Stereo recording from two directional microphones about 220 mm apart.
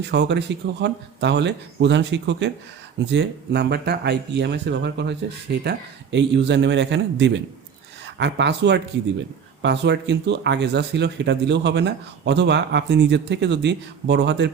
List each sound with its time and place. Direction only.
0.0 s speech: 50° right (ahead or behind)